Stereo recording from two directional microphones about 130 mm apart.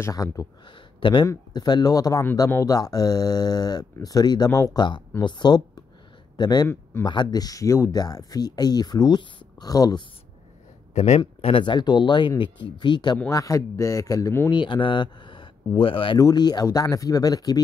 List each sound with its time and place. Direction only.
0.0 s speech: 25° left (ahead or behind)
5.2 s speech: 35° left (ahead or behind)
6.7 s speech: 20° left (ahead or behind)
7.1 s speech: 35° left (ahead or behind)
11.0 s speech: 55° left (ahead or behind)
11.6 s speech: 35° left (ahead or behind)
14.5 s speech: 40° left (ahead or behind)
16.2 s speech: 30° left (ahead or behind)